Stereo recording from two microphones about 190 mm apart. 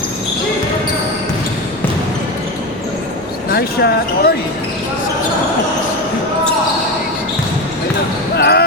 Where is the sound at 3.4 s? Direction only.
55° left (ahead or behind).